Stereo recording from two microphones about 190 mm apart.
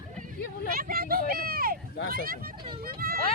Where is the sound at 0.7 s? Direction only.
50° right (ahead or behind).